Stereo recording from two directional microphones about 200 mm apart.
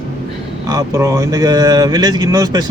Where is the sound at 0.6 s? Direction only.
15° right (ahead or behind).